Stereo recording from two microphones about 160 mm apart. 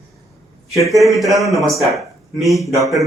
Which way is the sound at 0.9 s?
Centre (ahead or behind).